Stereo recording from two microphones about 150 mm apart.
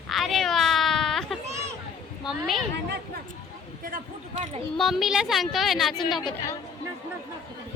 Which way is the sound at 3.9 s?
55° right (ahead or behind).